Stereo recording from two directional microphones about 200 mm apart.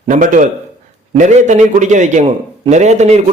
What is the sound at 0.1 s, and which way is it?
A man's voice, 40° right (ahead or behind).